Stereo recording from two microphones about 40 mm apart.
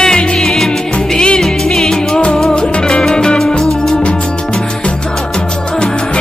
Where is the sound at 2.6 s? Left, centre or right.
Left.